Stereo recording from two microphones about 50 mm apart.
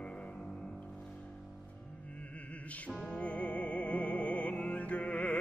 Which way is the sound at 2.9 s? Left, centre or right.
Centre.